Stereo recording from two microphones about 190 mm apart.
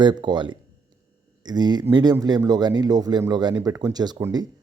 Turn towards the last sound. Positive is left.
turn(degrees=-20)  # may be behind; listen again after turning